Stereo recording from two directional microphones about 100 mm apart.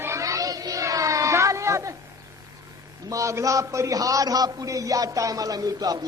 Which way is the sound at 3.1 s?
30° right (ahead or behind).